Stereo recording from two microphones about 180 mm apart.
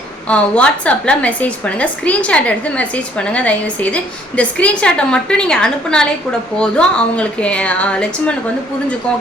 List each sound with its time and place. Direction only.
0.3 s a woman's voice: 5° left (ahead or behind)